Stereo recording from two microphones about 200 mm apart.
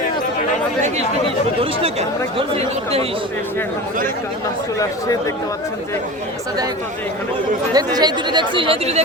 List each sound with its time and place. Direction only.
2.6 s speech: 30° right (ahead or behind)
7.7 s speech: 20° right (ahead or behind)